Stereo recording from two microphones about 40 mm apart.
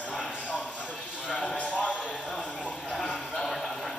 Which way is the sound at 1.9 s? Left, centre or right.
Left.